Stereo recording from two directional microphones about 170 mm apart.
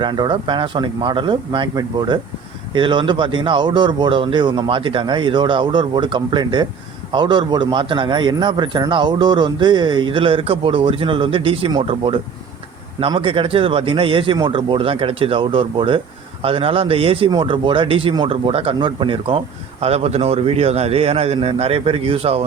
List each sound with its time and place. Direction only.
0.0 s a man's voice: 25° right (ahead or behind)